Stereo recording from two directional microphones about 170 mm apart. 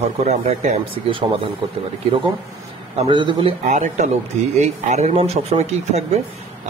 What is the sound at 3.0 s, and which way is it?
Speech, 30° right (ahead or behind).